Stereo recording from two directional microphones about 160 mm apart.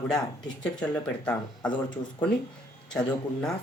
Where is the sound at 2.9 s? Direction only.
5° left (ahead or behind).